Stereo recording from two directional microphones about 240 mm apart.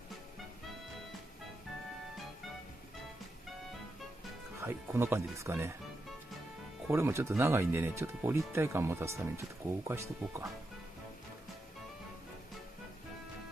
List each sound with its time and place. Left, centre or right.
4.6 s speech: centre
6.9 s speech: centre